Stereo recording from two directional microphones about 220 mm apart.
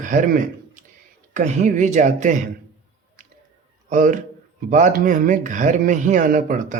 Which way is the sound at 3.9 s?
35° right (ahead or behind).